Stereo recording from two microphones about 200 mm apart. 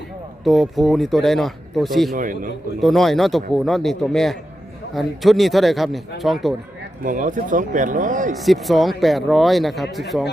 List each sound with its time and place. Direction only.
0.4 s speech: centre (ahead or behind)
2.1 s a man's voice: 45° right (ahead or behind)
2.8 s speech: centre (ahead or behind)
7.0 s speech: 40° right (ahead or behind)
8.4 s speech: centre (ahead or behind)